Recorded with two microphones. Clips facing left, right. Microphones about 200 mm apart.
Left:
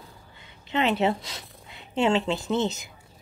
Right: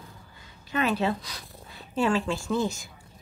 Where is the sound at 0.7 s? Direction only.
25° left (ahead or behind).